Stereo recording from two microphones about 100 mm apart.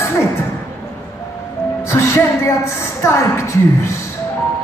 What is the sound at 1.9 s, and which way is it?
Speech, 25° left (ahead or behind).